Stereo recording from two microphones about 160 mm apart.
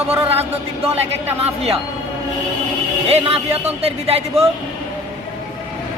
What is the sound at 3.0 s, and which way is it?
A man's voice, 40° right (ahead or behind).